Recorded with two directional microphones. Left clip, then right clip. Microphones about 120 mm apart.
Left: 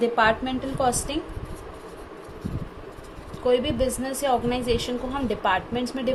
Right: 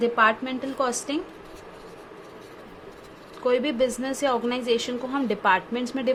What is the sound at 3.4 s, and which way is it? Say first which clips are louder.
Speech: even; 70° right (ahead or behind).